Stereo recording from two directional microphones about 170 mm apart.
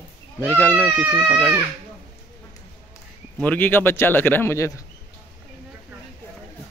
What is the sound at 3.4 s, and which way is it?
A man's voice, 10° left (ahead or behind).